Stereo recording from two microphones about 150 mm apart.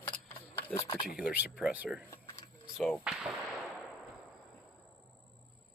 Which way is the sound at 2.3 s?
40° left (ahead or behind).